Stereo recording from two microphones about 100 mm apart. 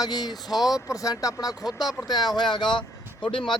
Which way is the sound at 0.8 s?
35° left (ahead or behind).